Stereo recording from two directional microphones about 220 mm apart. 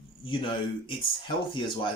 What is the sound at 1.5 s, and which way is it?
Speech, 20° left (ahead or behind).